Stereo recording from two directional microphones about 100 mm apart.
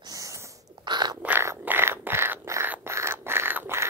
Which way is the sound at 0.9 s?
45° right (ahead or behind).